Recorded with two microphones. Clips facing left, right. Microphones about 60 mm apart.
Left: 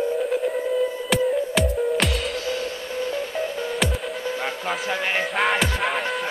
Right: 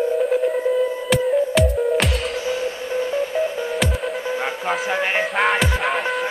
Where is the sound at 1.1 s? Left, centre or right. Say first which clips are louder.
Right 4 dB; centre.